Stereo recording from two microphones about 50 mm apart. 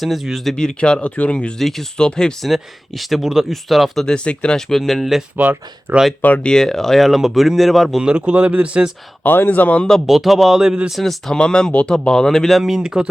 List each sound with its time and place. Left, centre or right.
0.0 s speech: centre
0.5 s speech: centre
1.5 s speech: centre
2.0 s speech: centre
2.4 s speech: centre
4.0 s speech: centre
5.4 s speech: right
6.4 s speech: centre
8.0 s speech: centre
9.2 s speech: left
9.5 s speech: left
10.1 s speech: centre
11.0 s speech: centre